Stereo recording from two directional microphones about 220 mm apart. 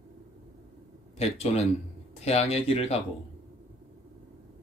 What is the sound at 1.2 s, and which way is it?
Speech, 30° left (ahead or behind).